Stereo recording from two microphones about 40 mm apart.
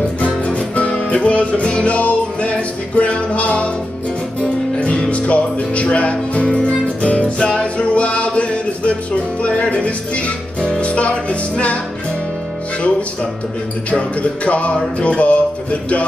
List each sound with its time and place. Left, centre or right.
0.2 s music: left
13.8 s music: left